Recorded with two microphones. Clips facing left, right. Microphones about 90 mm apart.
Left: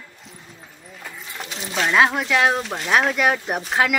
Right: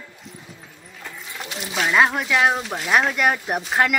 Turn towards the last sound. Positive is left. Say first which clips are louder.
# even
turn(degrees=0)  # may be behind; listen again after turning